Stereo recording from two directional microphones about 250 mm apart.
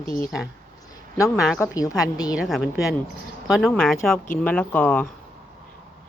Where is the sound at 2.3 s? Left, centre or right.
Centre.